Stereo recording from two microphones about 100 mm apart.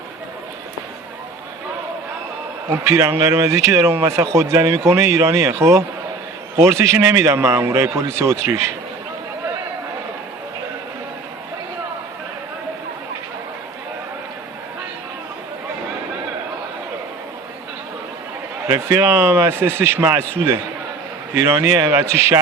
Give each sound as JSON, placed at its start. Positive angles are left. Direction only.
{"t": 2.6, "sound": "a man's voice", "side_deg": -30}
{"t": 18.7, "sound": "a man's voice", "side_deg": -25}